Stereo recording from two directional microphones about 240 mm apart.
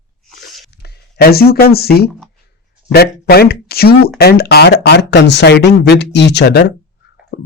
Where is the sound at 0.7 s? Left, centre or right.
Left.